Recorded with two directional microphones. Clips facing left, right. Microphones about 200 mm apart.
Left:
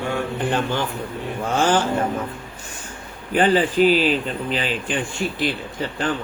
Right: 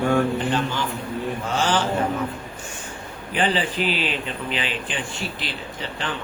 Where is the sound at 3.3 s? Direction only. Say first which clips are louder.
Left 6 dB; 45° left (ahead or behind).